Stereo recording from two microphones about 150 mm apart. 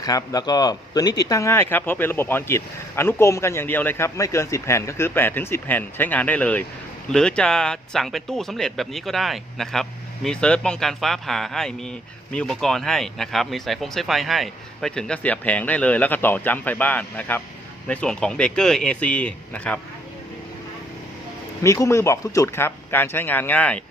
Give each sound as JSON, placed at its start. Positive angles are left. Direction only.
{"t": 0.0, "sound": "speech", "side_deg": 25}
{"t": 21.6, "sound": "speech", "side_deg": 20}